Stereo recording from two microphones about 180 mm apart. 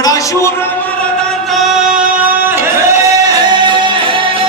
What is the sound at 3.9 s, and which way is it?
Music, 30° right (ahead or behind).